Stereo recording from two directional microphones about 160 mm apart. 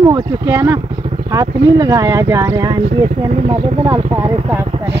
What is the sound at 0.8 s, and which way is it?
Vehicle, 35° right (ahead or behind).